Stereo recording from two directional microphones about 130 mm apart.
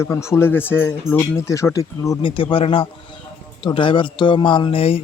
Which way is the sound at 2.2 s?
40° left (ahead or behind).